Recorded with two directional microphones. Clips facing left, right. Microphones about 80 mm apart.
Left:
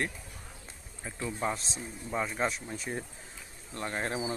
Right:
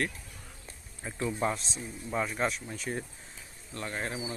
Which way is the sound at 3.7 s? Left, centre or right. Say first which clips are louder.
Left 2 dB; left.